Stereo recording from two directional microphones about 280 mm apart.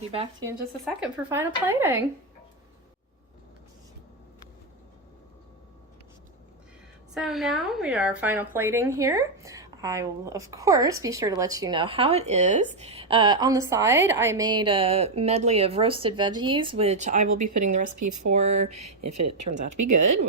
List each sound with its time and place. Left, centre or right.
0.1 s a woman's voice: centre
0.9 s a woman's voice: centre
7.1 s a woman's voice: centre; by 17.2 s right
17.3 s a woman's voice: right
17.6 s speech: right
17.8 s speech: right
18.2 s speech: right
18.7 s a woman's voice: right